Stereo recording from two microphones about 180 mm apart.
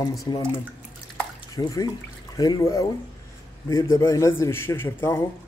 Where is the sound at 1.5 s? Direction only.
20° left (ahead or behind).